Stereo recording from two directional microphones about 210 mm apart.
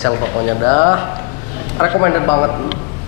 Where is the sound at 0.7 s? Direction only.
20° left (ahead or behind).